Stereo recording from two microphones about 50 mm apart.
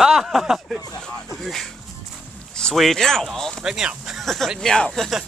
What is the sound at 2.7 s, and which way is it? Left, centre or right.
Speech, centre.